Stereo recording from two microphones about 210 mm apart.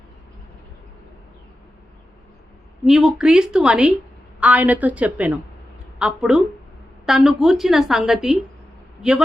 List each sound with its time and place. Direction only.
2.8 s a woman's voice: centre (ahead or behind)